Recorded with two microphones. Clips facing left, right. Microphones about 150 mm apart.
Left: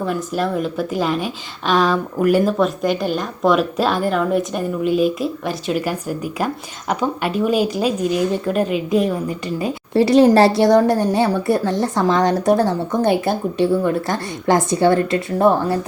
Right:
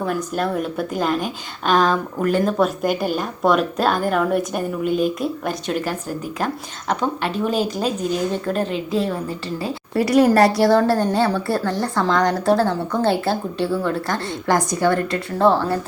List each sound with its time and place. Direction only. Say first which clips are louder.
0.0 s a woman's voice: left 1 dB; centre (ahead or behind); by 15.9 s 20° left (ahead or behind)